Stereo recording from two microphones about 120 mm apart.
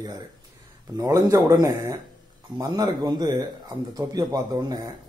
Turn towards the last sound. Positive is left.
turn(degrees=-30)  # may be behind; listen again after turning